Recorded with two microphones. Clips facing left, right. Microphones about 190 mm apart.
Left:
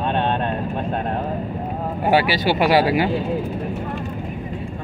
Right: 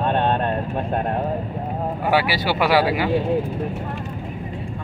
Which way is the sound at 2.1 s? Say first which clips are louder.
Left 3 dB; 20° left (ahead or behind).